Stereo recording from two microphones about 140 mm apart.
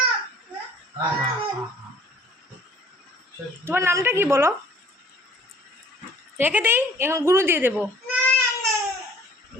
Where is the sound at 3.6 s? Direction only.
15° right (ahead or behind).